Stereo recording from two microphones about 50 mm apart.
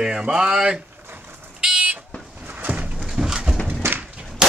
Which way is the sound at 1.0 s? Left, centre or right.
Right.